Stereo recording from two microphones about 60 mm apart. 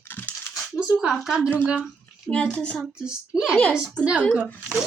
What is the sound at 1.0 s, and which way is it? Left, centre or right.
Speech, centre.